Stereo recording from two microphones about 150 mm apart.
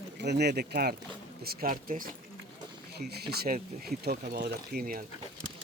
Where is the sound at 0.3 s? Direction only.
90° right.